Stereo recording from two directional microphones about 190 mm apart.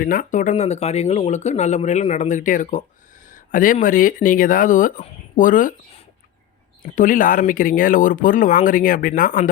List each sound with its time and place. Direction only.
0.0 s speech: 45° left (ahead or behind)
6.9 s speech: 45° left (ahead or behind)